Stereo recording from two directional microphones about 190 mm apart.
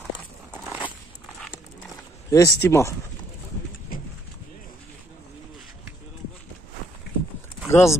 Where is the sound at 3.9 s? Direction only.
50° left (ahead or behind).